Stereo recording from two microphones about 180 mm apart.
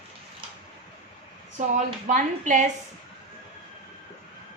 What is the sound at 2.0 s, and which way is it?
Speech, 45° right (ahead or behind).